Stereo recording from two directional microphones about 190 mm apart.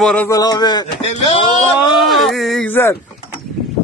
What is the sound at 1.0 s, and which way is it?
Speech, 35° left (ahead or behind).